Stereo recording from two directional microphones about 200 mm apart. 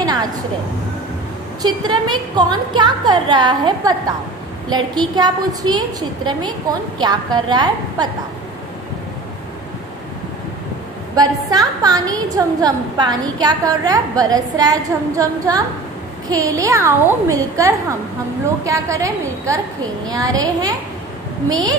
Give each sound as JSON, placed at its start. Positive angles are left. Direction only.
{"t": 0.0, "sound": "a sound", "side_deg": -20}
{"t": 1.6, "sound": "a woman's voice", "side_deg": -20}
{"t": 11.2, "sound": "a woman's voice", "side_deg": -20}